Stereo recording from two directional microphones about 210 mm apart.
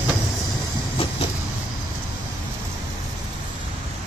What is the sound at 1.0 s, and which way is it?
Vehicle, 25° left (ahead or behind).